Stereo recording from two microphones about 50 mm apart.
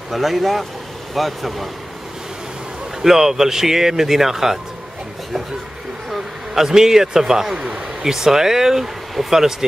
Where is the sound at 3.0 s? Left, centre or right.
Centre.